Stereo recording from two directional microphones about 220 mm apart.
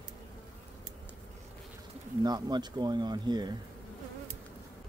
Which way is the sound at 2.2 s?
20° right (ahead or behind).